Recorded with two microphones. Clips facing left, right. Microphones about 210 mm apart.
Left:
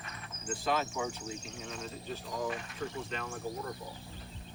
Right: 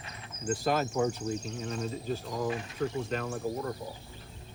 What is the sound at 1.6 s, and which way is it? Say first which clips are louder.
Speech: right 7 dB; 40° right (ahead or behind).